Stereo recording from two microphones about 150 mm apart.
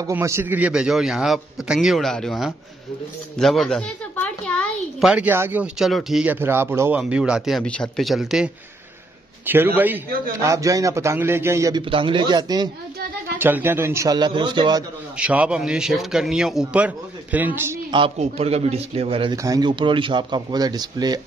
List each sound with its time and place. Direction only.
0.0 s a man's voice: 20° right (ahead or behind); by 3.8 s centre (ahead or behind)
4.2 s a sound: 5° left (ahead or behind)
5.0 s a man's voice: 10° right (ahead or behind)
9.5 s a man's voice: 15° right (ahead or behind)
11.9 s speech: 35° right (ahead or behind)
13.4 s speech: 15° right (ahead or behind)
15.1 s a man's voice: 5° right (ahead or behind)
17.9 s a man's voice: 40° right (ahead or behind)
19.3 s speech: 25° right (ahead or behind)